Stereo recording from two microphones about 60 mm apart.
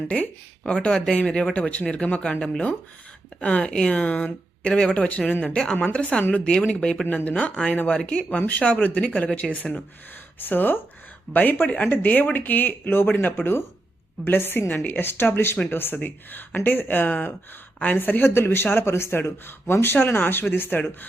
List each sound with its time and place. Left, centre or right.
0.1 s speech: centre
2.4 s speech: centre
10.3 s speech: left
11.9 s speech: left